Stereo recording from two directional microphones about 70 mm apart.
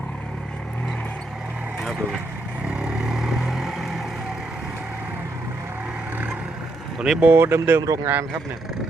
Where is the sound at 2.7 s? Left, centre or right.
Centre.